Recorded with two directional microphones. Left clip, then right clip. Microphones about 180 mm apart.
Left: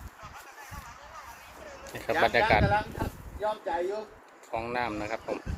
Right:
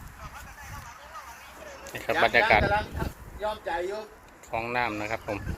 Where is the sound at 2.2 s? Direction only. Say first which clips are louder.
Right 3 dB; 5° left (ahead or behind).